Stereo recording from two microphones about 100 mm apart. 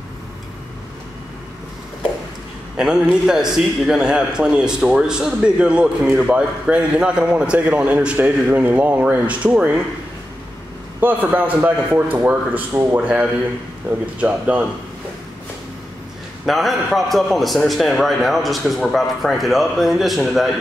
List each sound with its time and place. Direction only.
2.8 s a man's voice: 5° right (ahead or behind)
11.0 s a man's voice: 20° right (ahead or behind)
16.4 s a man's voice: centre (ahead or behind)